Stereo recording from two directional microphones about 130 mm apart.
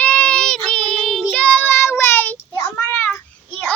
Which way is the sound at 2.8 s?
15° left (ahead or behind).